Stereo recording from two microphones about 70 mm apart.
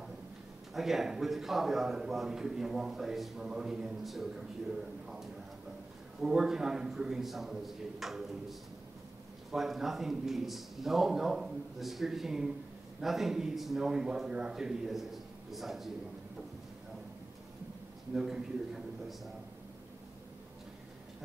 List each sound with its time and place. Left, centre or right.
0.7 s a man's voice: centre
18.1 s a man's voice: centre